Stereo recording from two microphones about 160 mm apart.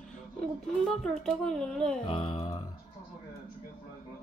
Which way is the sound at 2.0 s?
35° left (ahead or behind).